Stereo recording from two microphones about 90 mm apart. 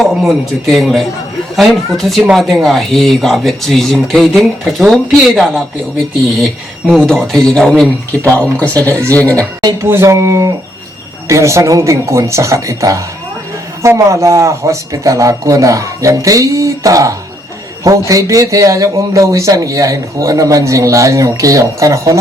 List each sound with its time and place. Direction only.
0.0 s speech: centre (ahead or behind)
6.9 s speech: 5° left (ahead or behind)
9.7 s a man's voice: 30° right (ahead or behind)